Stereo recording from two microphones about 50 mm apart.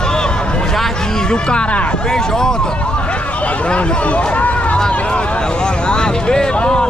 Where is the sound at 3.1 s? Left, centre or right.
Left.